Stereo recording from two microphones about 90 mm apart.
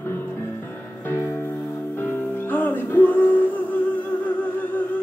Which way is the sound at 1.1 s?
25° left (ahead or behind).